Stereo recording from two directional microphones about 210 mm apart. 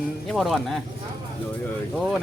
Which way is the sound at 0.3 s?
Centre (ahead or behind).